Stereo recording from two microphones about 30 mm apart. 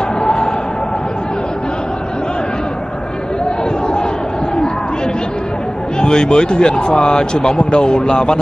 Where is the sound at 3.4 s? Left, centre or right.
Left.